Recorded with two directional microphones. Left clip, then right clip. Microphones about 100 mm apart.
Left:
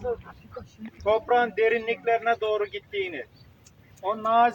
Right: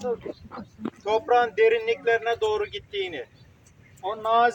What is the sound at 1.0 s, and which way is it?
Speech, 5° right (ahead or behind).